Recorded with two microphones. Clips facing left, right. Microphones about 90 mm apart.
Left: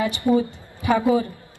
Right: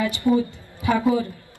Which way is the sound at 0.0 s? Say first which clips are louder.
Even; 20° left (ahead or behind).